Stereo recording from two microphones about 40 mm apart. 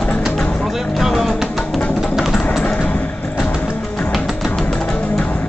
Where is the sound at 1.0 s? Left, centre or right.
Centre.